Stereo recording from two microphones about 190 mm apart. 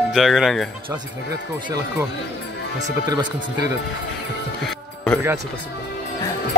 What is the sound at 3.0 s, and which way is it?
Speech, 20° right (ahead or behind).